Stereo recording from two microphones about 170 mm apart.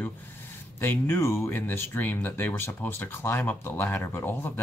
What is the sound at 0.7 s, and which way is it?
Speech, 15° left (ahead or behind).